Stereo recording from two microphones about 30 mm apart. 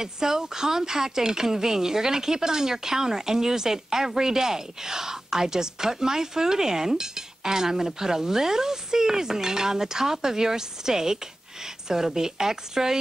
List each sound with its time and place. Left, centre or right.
0.0 s speech: centre